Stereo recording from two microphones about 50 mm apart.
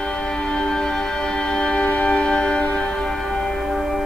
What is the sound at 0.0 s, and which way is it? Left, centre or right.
Music, centre.